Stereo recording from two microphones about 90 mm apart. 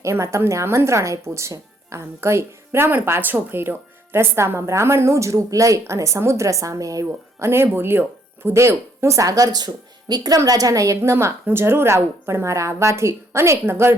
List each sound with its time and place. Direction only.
0.0 s speech: 35° right (ahead or behind)